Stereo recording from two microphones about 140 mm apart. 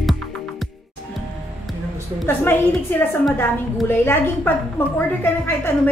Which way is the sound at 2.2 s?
15° left (ahead or behind).